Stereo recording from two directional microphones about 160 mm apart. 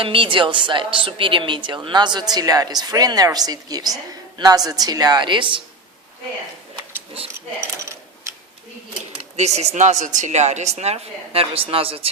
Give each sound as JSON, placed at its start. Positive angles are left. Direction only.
{"t": 0.0, "sound": "a woman's voice", "side_deg": -35}
{"t": 7.8, "sound": "coin", "side_deg": -20}
{"t": 9.3, "sound": "speech", "side_deg": -45}